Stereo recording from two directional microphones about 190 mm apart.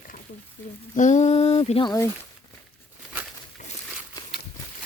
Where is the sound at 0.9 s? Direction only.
40° left (ahead or behind); by 2.0 s 25° left (ahead or behind).